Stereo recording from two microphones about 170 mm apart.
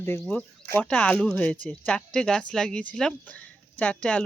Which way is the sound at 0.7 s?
10° left (ahead or behind).